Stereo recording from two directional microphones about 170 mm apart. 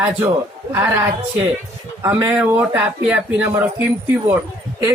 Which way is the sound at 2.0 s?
15° right (ahead or behind).